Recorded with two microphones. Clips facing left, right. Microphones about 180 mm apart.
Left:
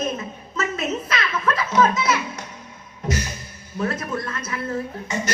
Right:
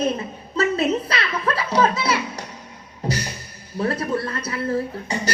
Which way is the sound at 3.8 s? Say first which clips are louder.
Right 3 dB; 35° right (ahead or behind).